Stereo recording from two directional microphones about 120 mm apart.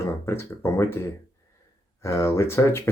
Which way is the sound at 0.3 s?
20° left (ahead or behind).